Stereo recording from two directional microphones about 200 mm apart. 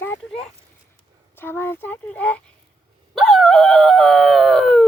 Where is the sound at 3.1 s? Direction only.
Centre (ahead or behind).